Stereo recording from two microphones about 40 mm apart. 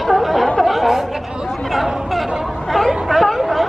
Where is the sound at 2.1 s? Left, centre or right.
Centre.